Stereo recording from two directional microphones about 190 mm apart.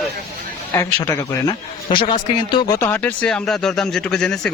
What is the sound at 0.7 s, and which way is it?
A man's voice, 20° left (ahead or behind).